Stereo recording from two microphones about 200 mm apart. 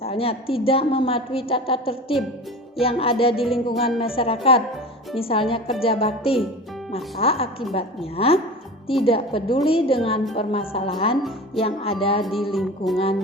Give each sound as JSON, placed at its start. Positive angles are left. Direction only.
{"t": 0.0, "sound": "a woman's voice", "side_deg": 30}
{"t": 12.2, "sound": "music", "side_deg": 0}